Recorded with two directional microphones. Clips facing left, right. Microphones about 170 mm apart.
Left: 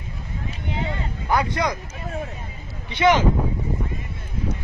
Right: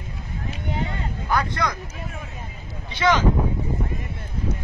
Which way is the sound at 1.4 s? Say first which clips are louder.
Left 3 dB; 15° left (ahead or behind).